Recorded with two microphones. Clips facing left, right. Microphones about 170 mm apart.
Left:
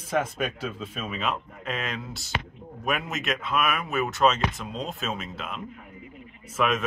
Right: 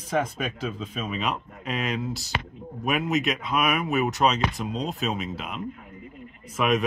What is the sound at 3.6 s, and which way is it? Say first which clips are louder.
Speech: right 3 dB; 15° right (ahead or behind).